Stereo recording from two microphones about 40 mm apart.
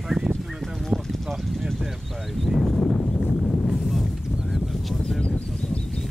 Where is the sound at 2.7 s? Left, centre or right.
Centre.